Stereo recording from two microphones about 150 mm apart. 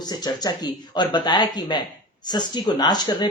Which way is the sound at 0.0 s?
25° left (ahead or behind).